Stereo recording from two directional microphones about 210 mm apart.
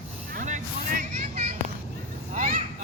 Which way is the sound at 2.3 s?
40° right (ahead or behind).